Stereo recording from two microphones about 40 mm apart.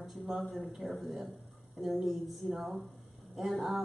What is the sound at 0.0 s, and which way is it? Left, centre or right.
A woman's voice, centre.